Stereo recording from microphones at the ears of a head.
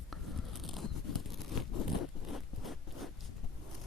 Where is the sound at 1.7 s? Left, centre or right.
Left.